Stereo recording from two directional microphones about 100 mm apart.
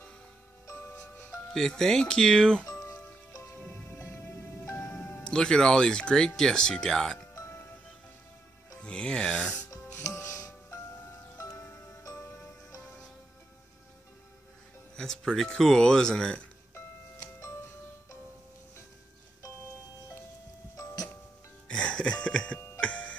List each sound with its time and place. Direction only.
0.7 s music: 25° left (ahead or behind)
1.5 s speech: 5° left (ahead or behind)
2.6 s music: 30° left (ahead or behind)
4.7 s speech: 15° left (ahead or behind)
7.3 s music: 25° left (ahead or behind)
8.8 s speech: 10° left (ahead or behind)
10.0 s music: 30° left (ahead or behind)
15.0 s speech: 5° left (ahead or behind)
16.7 s music: 30° left (ahead or behind)
20.7 s music: 35° left (ahead or behind)
21.6 s music: 10° left (ahead or behind)